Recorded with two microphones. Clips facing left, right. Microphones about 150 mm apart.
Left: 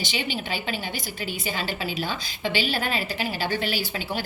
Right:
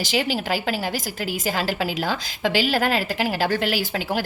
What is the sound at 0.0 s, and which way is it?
A woman's voice, 90° right.